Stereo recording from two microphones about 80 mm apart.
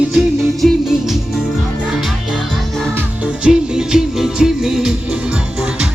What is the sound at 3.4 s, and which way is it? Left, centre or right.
Music, centre.